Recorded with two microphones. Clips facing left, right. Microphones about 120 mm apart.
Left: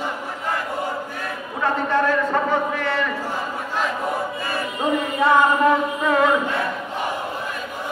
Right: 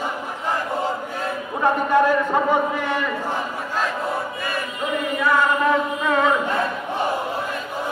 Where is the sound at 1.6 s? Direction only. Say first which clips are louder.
Right 3 dB; 15° right (ahead or behind).